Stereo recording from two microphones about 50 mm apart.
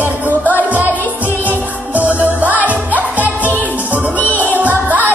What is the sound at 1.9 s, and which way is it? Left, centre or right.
Music, right.